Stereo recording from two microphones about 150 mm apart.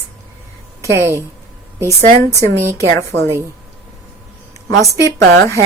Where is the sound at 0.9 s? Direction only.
20° right (ahead or behind).